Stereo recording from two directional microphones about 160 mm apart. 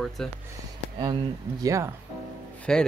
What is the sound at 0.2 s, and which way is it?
Speech, 5° left (ahead or behind).